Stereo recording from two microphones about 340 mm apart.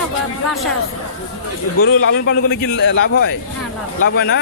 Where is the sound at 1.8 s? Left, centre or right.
Left.